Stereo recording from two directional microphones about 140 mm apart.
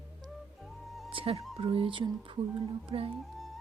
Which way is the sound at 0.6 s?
Centre (ahead or behind).